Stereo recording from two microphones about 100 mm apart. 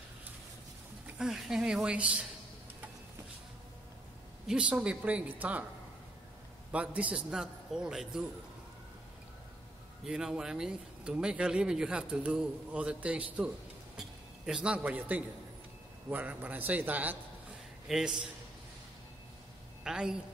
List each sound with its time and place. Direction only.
1.1 s speech: 5° right (ahead or behind)
4.5 s speech: 10° right (ahead or behind)
6.7 s speech: 15° right (ahead or behind)
10.0 s a man's voice: 5° right (ahead or behind)
17.8 s speech: 5° right (ahead or behind)
19.8 s a woman's voice: 5° right (ahead or behind)